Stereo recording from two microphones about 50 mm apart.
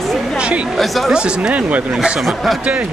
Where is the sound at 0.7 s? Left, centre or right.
Centre.